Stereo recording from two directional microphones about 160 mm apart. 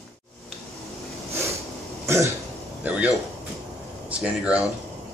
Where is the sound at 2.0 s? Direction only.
20° right (ahead or behind).